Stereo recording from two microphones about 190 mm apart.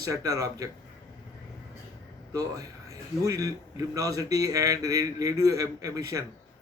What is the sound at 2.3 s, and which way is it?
A man's voice, 15° right (ahead or behind).